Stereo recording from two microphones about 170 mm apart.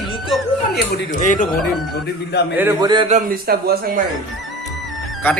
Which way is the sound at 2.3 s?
75° left (ahead or behind).